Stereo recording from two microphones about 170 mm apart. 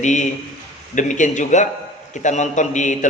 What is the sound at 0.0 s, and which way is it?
A man's voice, 45° left (ahead or behind).